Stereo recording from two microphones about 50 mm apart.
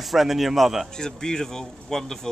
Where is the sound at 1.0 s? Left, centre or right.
Centre.